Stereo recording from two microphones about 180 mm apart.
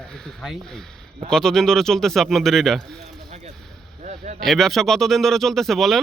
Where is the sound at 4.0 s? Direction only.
40° right (ahead or behind).